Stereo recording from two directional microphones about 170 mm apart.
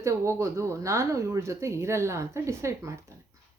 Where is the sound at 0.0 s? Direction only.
15° right (ahead or behind).